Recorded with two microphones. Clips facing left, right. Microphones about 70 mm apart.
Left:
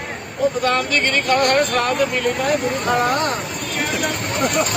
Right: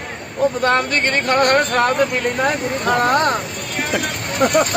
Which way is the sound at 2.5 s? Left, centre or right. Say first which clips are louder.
Even; right.